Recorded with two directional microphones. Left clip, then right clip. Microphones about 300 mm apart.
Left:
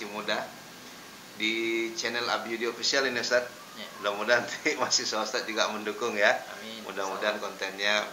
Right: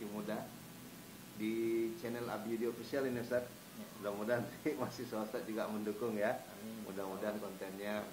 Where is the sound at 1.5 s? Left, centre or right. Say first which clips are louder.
Left 7 dB; left.